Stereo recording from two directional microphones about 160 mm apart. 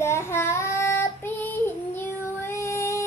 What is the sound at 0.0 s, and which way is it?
Child singing, 15° left (ahead or behind).